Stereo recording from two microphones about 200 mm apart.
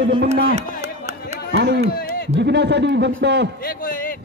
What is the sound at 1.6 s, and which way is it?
Speech, 55° right (ahead or behind).